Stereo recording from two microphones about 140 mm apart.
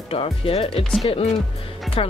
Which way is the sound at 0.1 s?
40° left (ahead or behind).